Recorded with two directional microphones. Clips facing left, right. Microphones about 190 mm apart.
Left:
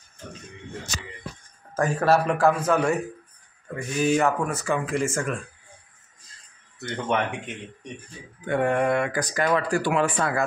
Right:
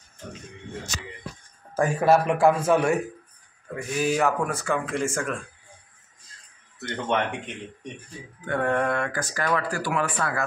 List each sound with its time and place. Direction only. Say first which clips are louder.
1.8 s a man's voice: right 1 dB; 10° right (ahead or behind)
3.7 s speech: left 2 dB; 5° right (ahead or behind)
6.8 s speech: even; 5° left (ahead or behind)
8.5 s speech: left 2 dB; 15° left (ahead or behind)